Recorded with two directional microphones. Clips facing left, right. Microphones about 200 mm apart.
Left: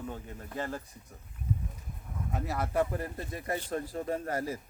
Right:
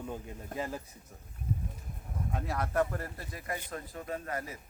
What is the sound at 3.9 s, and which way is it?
Speech, 35° left (ahead or behind).